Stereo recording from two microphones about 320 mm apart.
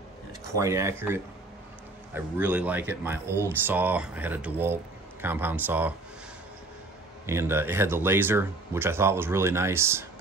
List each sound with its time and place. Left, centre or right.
0.6 s speech: centre
7.2 s speech: centre